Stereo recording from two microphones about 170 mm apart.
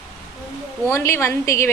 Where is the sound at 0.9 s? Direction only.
15° left (ahead or behind).